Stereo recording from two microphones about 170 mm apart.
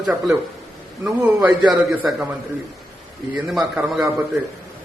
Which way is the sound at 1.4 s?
15° right (ahead or behind).